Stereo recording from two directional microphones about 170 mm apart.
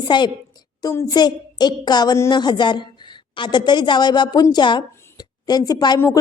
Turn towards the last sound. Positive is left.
turn(degrees=15)  # may be behind; listen again after turning